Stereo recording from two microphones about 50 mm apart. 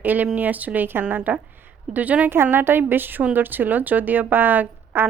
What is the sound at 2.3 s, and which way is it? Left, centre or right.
A woman's voice, right.